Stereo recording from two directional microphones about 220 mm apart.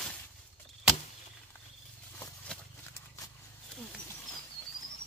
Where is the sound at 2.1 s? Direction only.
5° left (ahead or behind).